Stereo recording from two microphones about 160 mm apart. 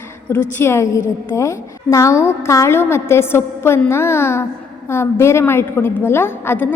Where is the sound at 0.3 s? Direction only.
15° left (ahead or behind).